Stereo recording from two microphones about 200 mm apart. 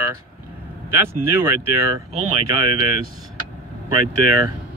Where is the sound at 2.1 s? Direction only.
25° right (ahead or behind).